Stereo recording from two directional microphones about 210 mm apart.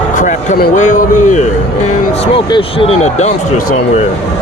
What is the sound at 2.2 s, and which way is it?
Speech, 25° left (ahead or behind).